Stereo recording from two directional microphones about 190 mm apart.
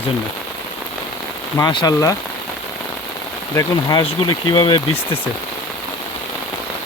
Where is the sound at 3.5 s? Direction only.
20° left (ahead or behind).